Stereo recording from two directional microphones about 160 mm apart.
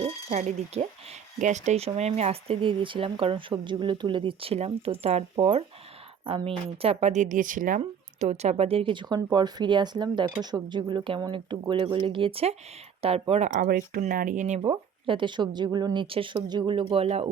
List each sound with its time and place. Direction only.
0.0 s speech: 45° right (ahead or behind)
7.8 s speech: 45° right (ahead or behind)
13.6 s speech: 65° right (ahead or behind)
14.6 s speech: 30° right (ahead or behind)